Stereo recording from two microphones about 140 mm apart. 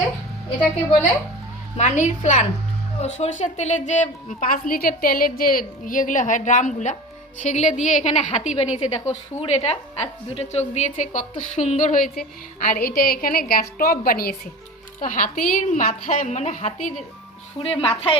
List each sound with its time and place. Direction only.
1.7 s a woman's voice: 60° left (ahead or behind); by 14.3 s 90° left
15.0 s a woman's voice: 75° left (ahead or behind); by 16.9 s 60° left (ahead or behind)
17.6 s a woman's voice: 40° left (ahead or behind)